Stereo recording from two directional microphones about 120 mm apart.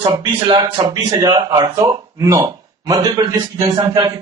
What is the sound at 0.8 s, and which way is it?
Speech, 45° right (ahead or behind).